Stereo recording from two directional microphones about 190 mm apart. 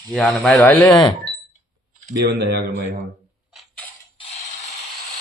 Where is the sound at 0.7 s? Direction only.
20° left (ahead or behind).